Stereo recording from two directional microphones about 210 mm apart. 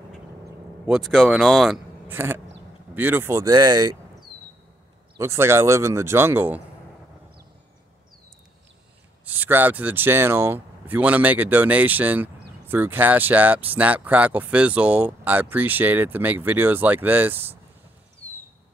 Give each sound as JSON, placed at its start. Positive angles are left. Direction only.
{"t": 0.8, "sound": "speech", "side_deg": 0}
{"t": 2.0, "sound": "a sound", "side_deg": -10}
{"t": 2.9, "sound": "speech", "side_deg": -10}
{"t": 5.1, "sound": "speech", "side_deg": -10}
{"t": 9.2, "sound": "speech", "side_deg": -10}